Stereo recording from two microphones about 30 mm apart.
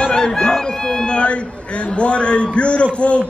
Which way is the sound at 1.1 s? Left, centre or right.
Left.